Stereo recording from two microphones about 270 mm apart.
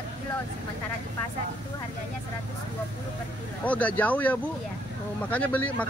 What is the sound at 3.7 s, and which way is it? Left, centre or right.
Speech, centre.